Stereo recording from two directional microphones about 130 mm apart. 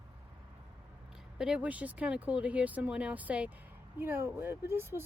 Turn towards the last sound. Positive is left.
turn(degrees=-20)  # may be behind; listen again after turning